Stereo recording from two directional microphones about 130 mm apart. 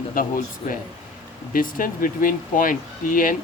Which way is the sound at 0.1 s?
90° left.